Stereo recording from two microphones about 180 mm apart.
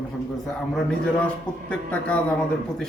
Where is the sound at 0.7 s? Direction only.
5° left (ahead or behind).